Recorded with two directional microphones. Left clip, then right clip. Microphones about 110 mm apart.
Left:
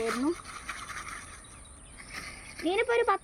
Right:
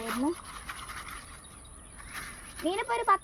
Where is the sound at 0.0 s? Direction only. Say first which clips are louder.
Left 2 dB; 50° left (ahead or behind).